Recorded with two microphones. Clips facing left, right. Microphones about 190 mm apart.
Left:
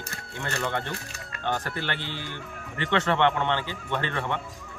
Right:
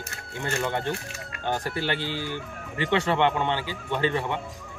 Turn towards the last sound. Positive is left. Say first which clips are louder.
# right 3 dB
turn(degrees=-15)  # may be behind; listen again after turning